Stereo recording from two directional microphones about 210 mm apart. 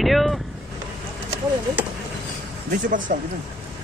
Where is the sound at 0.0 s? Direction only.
Centre (ahead or behind).